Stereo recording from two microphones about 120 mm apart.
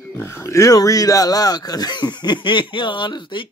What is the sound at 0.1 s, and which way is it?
Speech, 20° left (ahead or behind).